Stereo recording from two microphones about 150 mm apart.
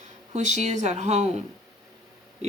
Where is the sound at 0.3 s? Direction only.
50° right (ahead or behind).